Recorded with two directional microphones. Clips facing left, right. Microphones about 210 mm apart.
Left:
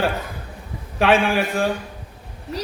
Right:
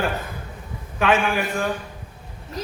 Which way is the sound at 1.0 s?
30° left (ahead or behind).